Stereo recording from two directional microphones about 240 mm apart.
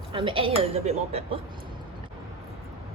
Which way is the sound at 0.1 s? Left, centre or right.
Right.